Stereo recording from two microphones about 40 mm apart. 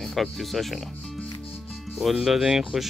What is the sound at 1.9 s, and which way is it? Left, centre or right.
Speech, centre.